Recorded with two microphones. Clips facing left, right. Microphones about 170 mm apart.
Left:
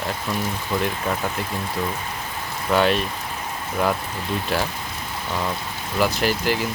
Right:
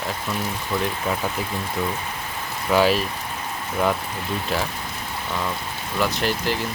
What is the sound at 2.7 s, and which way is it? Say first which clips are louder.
Speech: right 1 dB; 5° right (ahead or behind).